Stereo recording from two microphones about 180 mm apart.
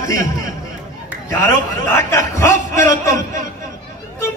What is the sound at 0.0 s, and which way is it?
Speech, 15° left (ahead or behind).